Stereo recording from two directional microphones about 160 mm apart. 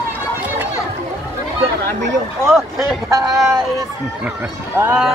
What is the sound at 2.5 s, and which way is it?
Speech, centre (ahead or behind).